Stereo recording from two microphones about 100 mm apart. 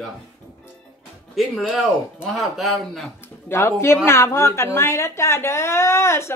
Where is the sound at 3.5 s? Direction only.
25° left (ahead or behind).